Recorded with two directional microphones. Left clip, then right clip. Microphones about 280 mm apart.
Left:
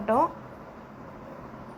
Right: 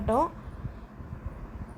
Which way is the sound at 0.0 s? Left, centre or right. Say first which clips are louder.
Left 2 dB; centre.